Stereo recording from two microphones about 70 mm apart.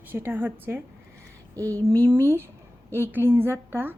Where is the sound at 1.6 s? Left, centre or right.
Right.